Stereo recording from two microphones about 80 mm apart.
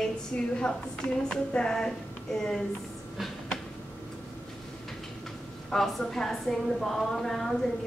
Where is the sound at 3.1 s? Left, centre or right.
Centre.